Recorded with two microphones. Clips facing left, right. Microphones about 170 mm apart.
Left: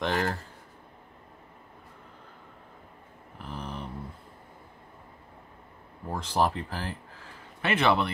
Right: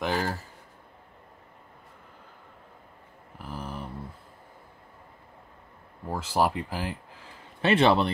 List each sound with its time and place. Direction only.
0.0 s speech: 5° right (ahead or behind)
3.3 s a sound: 5° right (ahead or behind)
6.0 s speech: 10° right (ahead or behind)
7.6 s a man's voice: 30° right (ahead or behind)